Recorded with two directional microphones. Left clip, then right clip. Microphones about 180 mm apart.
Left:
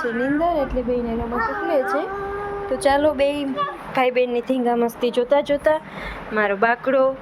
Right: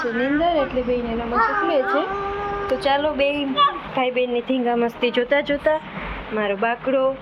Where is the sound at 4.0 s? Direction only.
75° left (ahead or behind); by 4.7 s 50° left (ahead or behind).